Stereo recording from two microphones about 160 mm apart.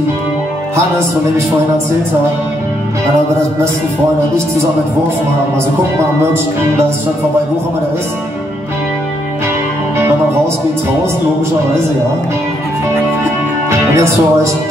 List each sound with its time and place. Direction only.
13.7 s music: 20° right (ahead or behind)